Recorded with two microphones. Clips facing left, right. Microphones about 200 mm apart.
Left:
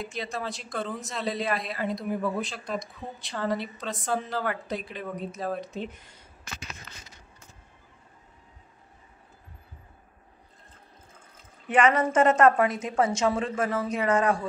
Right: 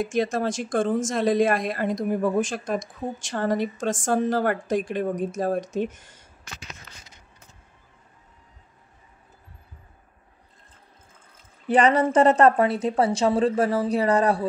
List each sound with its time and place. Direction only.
0.0 s speech: 50° right (ahead or behind)
11.6 s a woman's voice: 35° right (ahead or behind)